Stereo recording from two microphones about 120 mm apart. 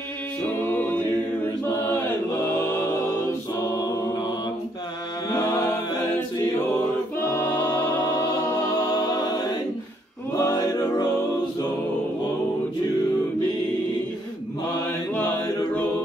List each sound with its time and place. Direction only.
0.7 s a capella: 15° left (ahead or behind)
5.5 s a capella: 20° left (ahead or behind)
7.2 s music: 15° left (ahead or behind)
8.8 s music: 30° left (ahead or behind)
10.3 s a sound: 30° left (ahead or behind)